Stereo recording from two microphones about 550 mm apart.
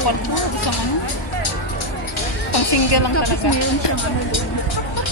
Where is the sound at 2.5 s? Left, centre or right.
Left.